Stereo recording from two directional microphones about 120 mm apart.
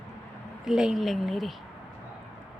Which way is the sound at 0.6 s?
5° right (ahead or behind).